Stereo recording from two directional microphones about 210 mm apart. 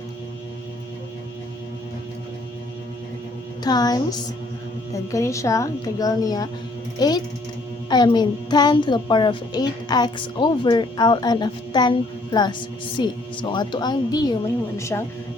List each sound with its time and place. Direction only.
3.6 s a child's voice: 20° left (ahead or behind)
5.1 s a child's voice: 15° left (ahead or behind)